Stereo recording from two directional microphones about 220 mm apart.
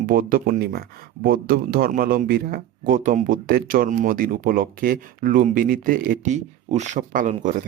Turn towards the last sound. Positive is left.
turn(degrees=-35)  # may be behind; listen again after turning